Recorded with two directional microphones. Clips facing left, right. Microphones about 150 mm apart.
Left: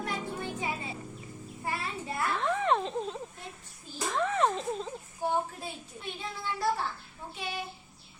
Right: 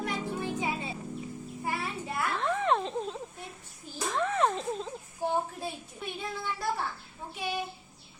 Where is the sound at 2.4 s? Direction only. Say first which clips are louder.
Even; centre (ahead or behind).